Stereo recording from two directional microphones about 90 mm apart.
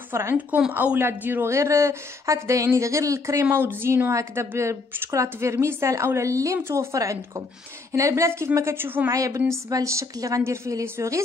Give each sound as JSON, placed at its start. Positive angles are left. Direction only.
{"t": 0.1, "sound": "speech", "side_deg": -30}
{"t": 0.5, "sound": "a woman's voice", "side_deg": -15}
{"t": 3.4, "sound": "a woman's voice", "side_deg": -25}
{"t": 9.1, "sound": "speech", "side_deg": -40}